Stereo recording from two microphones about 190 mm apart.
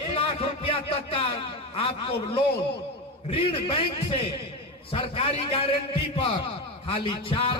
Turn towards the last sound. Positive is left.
turn(degrees=30)  # may be behind; listen again after turning